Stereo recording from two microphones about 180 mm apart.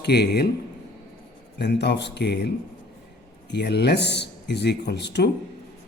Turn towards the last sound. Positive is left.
turn(degrees=70)  # may be behind; listen again after turning